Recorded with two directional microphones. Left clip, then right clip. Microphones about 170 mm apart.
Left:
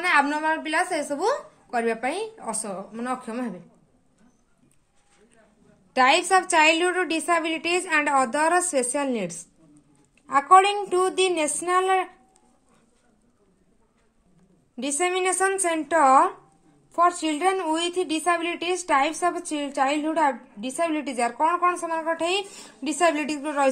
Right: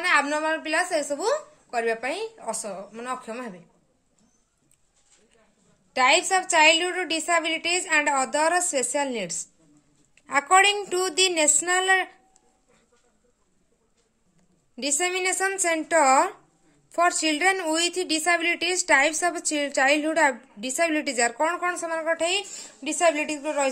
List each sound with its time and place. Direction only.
0.0 s a woman's voice: 10° right (ahead or behind)
5.9 s a woman's voice: centre (ahead or behind)
10.2 s a woman's voice: 30° right (ahead or behind)
14.8 s a woman's voice: 20° right (ahead or behind)
16.9 s a woman's voice: 35° right (ahead or behind); by 23.7 s centre (ahead or behind)